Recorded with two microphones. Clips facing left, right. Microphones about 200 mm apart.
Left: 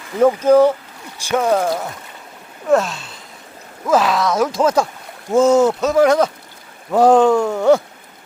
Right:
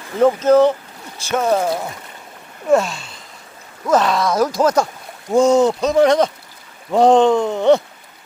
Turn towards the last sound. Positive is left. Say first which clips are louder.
# even
turn(degrees=5)  # may be behind; listen again after turning